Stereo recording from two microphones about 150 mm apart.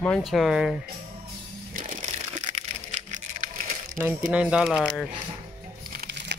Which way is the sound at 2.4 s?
50° right (ahead or behind).